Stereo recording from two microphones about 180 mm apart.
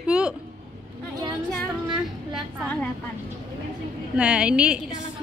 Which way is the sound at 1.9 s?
Centre (ahead or behind).